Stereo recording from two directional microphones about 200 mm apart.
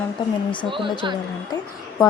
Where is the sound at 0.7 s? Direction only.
25° right (ahead or behind).